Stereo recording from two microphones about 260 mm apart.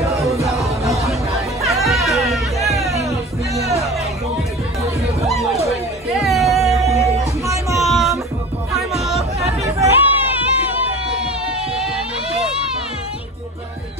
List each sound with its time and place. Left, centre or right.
0.0 s music: centre
1.6 s music: centre
3.0 s music: centre
3.6 s music: right
5.7 s music: centre
9.6 s music: centre